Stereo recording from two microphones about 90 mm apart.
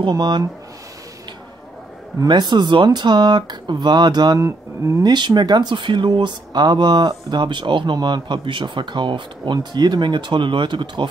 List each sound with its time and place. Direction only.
0.1 s speech: 50° right (ahead or behind)
2.2 s speech: 55° right (ahead or behind)
4.4 s speech: 35° right (ahead or behind)
5.0 s speech: 55° right (ahead or behind)